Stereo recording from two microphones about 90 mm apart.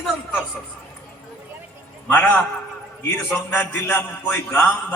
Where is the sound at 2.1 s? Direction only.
15° left (ahead or behind).